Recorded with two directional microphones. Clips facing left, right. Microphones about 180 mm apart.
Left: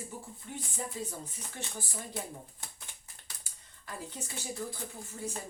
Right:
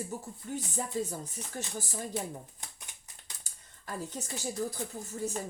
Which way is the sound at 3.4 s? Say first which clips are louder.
Right 6 dB; 45° right (ahead or behind).